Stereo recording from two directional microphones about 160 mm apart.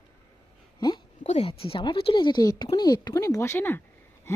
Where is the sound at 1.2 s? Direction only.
40° left (ahead or behind).